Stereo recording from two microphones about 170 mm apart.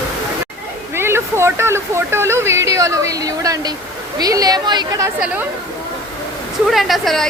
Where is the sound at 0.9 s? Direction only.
15° right (ahead or behind).